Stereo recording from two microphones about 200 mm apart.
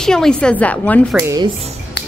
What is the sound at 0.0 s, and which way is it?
A woman's voice, 5° left (ahead or behind).